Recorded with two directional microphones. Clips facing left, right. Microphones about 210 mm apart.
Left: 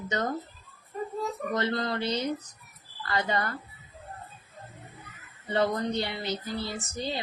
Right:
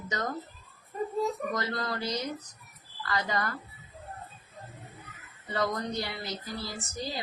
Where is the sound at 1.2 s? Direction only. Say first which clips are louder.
Right 5 dB; centre (ahead or behind).